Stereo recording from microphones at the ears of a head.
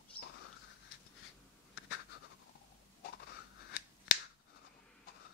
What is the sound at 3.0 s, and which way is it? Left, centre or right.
Scissors, left.